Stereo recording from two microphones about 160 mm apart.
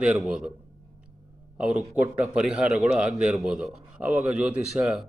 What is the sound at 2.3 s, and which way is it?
A man's voice, 5° right (ahead or behind).